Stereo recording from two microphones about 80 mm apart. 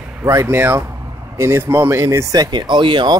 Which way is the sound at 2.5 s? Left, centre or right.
Right.